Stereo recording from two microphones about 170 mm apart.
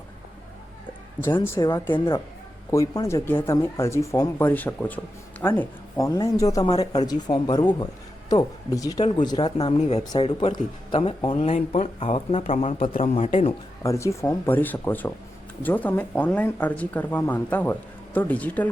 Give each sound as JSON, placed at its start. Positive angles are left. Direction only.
{"t": 1.2, "sound": "speech", "side_deg": 15}
{"t": 9.4, "sound": "speech", "side_deg": 35}
{"t": 10.0, "sound": "speech", "side_deg": 25}
{"t": 11.3, "sound": "speech", "side_deg": 40}
{"t": 13.8, "sound": "speech", "side_deg": 15}